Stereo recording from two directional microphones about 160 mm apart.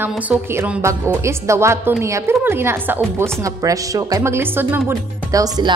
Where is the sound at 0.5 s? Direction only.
15° right (ahead or behind).